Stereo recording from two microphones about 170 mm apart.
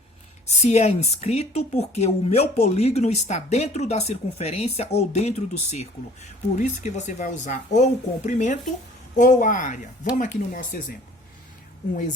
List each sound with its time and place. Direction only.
0.4 s a woman's voice: 40° left (ahead or behind)